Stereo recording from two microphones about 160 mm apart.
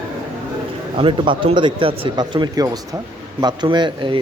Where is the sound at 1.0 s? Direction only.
30° right (ahead or behind).